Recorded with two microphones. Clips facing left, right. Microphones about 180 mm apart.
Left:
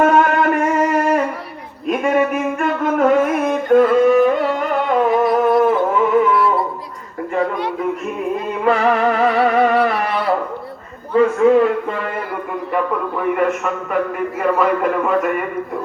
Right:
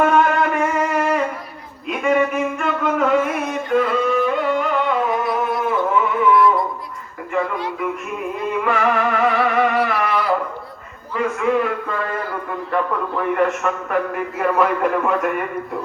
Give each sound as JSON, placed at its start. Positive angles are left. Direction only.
{"t": 0.0, "sound": "music", "side_deg": 50}
{"t": 1.9, "sound": "a sound", "side_deg": 50}
{"t": 6.3, "sound": "music", "side_deg": 30}
{"t": 8.6, "sound": "music", "side_deg": 35}
{"t": 11.1, "sound": "a sound", "side_deg": 35}
{"t": 12.7, "sound": "a man's voice", "side_deg": 5}